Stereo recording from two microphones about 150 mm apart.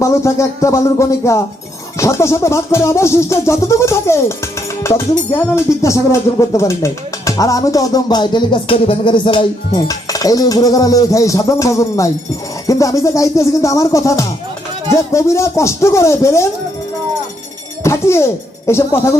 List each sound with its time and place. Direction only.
0.0 s music: 20° left (ahead or behind)
17.8 s speech: 20° left (ahead or behind)